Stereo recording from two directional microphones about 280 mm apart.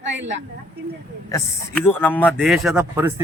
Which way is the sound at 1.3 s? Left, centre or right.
Centre.